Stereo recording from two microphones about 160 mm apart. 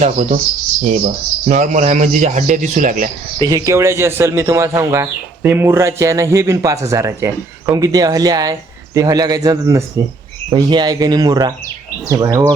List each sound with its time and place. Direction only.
0.0 s a man's voice: 50° right (ahead or behind)
1.5 s a man's voice: 50° right (ahead or behind)
3.3 s speech: 30° right (ahead or behind)
3.6 s speech: 15° right (ahead or behind)